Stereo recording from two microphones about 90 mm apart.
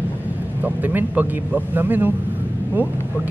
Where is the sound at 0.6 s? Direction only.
20° right (ahead or behind).